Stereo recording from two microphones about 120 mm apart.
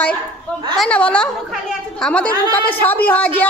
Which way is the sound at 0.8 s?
10° left (ahead or behind).